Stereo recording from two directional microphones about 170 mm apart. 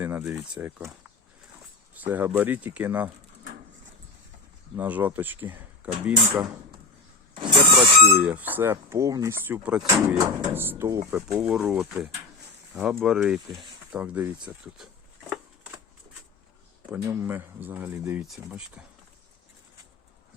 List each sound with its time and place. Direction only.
0.0 s speech: 10° right (ahead or behind)
1.9 s speech: 10° right (ahead or behind)
4.8 s speech: 10° right (ahead or behind)
7.3 s vehicle: 30° right (ahead or behind)
8.2 s speech: 10° right (ahead or behind)
16.9 s speech: 15° right (ahead or behind)